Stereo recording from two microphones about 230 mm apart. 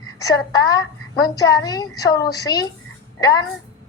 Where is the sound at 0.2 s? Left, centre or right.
Centre.